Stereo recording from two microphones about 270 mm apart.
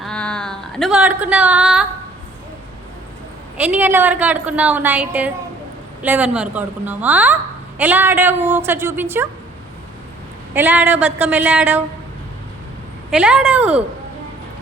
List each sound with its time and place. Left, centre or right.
0.0 s a sound: centre
3.6 s a woman's voice: centre
10.5 s a woman's voice: centre
13.1 s speech: centre